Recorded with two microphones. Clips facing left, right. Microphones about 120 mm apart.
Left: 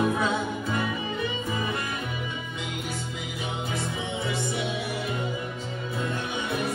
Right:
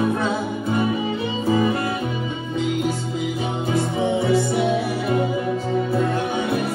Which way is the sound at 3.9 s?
55° right (ahead or behind).